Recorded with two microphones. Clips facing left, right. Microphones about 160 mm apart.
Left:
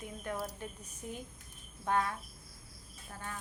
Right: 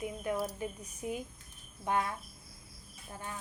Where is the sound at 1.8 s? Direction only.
15° right (ahead or behind).